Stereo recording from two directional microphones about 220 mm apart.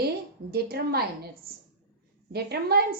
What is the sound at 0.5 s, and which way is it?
A woman's voice, 45° right (ahead or behind).